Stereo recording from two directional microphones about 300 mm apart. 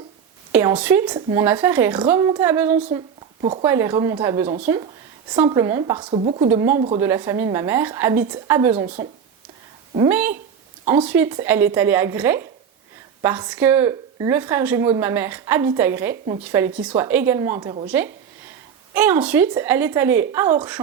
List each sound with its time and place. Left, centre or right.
0.5 s speech: centre
3.4 s speech: centre
3.7 s speech: centre
8.7 s speech: right
10.1 s speech: centre